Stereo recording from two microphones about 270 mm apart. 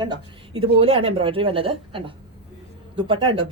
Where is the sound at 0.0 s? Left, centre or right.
Centre.